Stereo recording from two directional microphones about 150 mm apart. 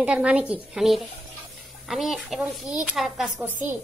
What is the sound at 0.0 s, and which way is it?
Speech, 5° right (ahead or behind).